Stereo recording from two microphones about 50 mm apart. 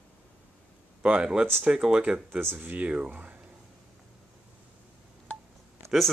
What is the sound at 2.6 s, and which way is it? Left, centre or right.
Speech, right.